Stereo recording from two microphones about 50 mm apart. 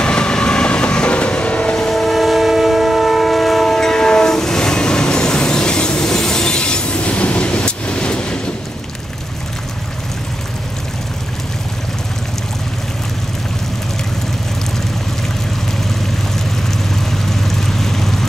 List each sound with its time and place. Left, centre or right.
0.0 s train: centre
1.8 s train: centre
16.9 s vehicle: centre